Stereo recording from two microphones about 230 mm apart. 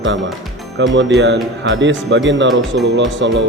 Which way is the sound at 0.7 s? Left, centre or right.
Right.